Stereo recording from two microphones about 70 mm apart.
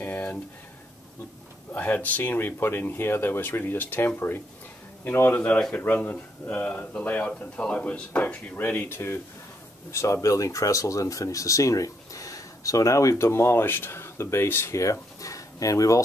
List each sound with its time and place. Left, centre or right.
0.0 s a sound: left
1.7 s speech: left
9.8 s speech: left
14.8 s speech: left